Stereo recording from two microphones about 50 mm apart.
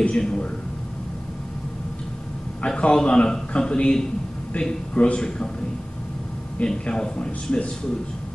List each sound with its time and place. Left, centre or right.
0.2 s a man's voice: centre
2.6 s a man's voice: centre
6.6 s a man's voice: centre